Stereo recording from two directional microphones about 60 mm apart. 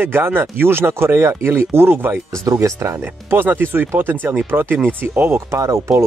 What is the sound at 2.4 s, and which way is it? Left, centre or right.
Speech, right.